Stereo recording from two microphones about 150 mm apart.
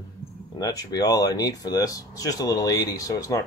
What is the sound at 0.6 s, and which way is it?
Speech, 25° left (ahead or behind).